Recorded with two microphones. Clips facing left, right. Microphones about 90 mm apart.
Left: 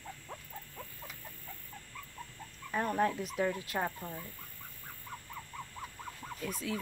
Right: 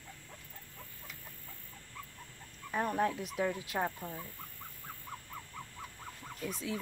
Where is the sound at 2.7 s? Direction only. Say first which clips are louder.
Left 1 dB; 10° right (ahead or behind).